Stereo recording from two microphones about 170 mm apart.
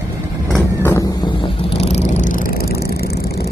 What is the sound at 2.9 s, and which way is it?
Vehicle, 70° left (ahead or behind).